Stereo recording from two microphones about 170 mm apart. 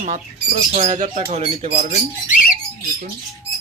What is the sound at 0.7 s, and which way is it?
Speech, 40° right (ahead or behind).